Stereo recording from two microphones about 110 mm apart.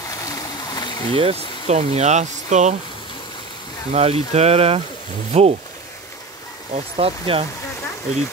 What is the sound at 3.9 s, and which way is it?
Speech, 70° right (ahead or behind).